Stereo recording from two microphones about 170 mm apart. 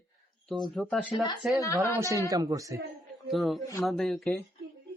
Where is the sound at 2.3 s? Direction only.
20° right (ahead or behind).